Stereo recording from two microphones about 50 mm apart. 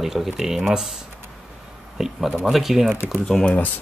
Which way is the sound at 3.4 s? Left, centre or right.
Left.